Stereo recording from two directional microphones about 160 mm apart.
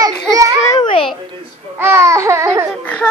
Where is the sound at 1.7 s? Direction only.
15° right (ahead or behind).